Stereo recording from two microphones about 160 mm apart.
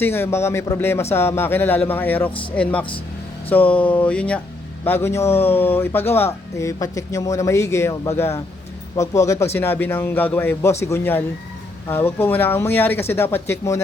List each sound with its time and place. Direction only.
0.0 s speech: 15° left (ahead or behind)